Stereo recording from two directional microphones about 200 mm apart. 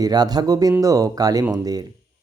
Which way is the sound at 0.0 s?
20° right (ahead or behind).